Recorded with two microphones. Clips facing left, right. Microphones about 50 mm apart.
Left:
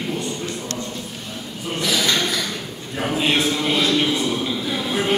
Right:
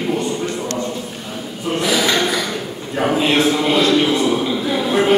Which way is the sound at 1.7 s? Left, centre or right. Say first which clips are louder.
Right 4 dB; centre.